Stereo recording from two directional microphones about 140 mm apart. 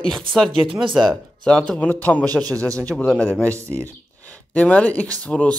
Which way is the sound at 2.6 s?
25° right (ahead or behind).